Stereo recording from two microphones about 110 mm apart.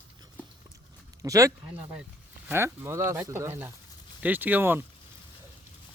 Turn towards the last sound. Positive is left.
turn(degrees=-20)  # may be behind; listen again after turning